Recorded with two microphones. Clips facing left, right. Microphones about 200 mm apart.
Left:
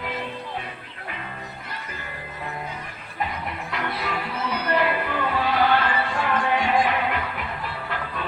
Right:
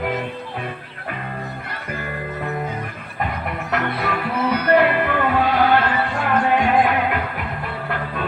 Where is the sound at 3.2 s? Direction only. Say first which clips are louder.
Right 4 dB; 60° right (ahead or behind).